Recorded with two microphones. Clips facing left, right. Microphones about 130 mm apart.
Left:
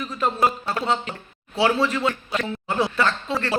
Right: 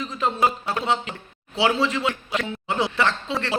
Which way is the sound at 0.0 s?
20° right (ahead or behind).